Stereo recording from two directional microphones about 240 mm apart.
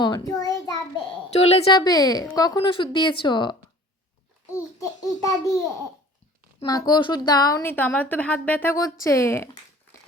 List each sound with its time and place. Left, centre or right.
0.0 s child singing: centre
1.3 s a woman's voice: left
5.0 s a woman's voice: centre
6.6 s a woman's voice: centre